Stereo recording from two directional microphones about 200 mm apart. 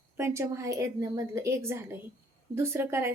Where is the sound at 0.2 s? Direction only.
15° right (ahead or behind).